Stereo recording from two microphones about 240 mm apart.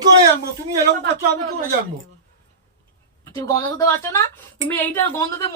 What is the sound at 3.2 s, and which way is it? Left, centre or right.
A woman's voice, centre.